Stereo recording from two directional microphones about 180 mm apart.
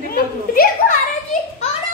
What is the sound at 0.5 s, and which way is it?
Children playing, 55° left (ahead or behind).